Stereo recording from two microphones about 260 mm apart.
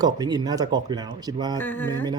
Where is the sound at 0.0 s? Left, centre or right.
Centre.